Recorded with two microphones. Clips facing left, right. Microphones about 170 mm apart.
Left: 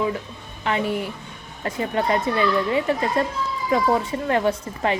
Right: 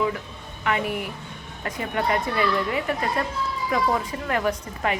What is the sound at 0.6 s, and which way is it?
Speech, 30° left (ahead or behind).